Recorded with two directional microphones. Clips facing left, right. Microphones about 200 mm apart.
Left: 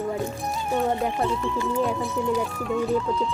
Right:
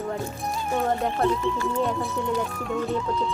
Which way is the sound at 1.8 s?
Centre (ahead or behind).